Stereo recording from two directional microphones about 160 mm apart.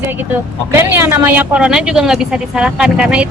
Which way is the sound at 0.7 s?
15° right (ahead or behind).